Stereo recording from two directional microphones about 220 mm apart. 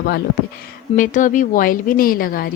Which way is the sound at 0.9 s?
35° left (ahead or behind).